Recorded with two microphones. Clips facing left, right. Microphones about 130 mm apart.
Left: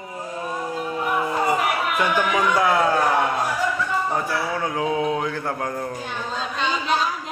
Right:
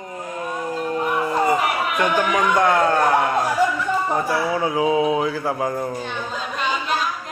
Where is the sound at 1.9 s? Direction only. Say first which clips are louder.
Right 3 dB; centre (ahead or behind).